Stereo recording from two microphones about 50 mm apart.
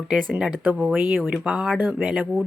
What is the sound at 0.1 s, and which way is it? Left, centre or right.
Speech, right.